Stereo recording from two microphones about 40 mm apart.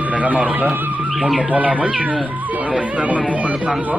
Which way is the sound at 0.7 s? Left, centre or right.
Right.